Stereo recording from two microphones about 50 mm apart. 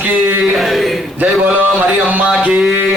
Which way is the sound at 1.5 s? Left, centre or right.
Right.